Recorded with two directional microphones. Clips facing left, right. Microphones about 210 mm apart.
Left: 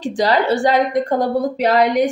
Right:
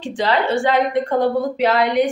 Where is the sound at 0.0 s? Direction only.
40° left (ahead or behind).